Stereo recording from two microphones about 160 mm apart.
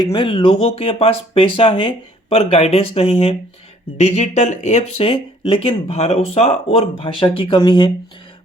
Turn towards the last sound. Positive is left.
turn(degrees=30)  # may be behind; listen again after turning